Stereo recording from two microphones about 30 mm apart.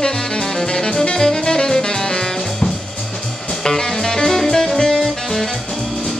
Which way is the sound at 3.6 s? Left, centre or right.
Centre.